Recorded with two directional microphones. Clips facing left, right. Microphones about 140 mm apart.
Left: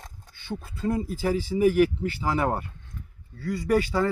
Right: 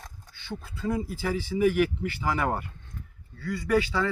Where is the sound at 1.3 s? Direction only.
40° left (ahead or behind).